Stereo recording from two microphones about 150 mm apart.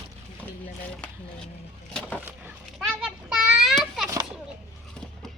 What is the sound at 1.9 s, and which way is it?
Speech, 5° left (ahead or behind).